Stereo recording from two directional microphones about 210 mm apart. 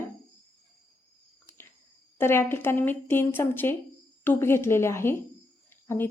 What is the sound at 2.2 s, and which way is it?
A woman's voice, 10° left (ahead or behind).